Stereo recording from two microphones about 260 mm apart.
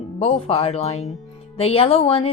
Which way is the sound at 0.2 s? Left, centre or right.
Left.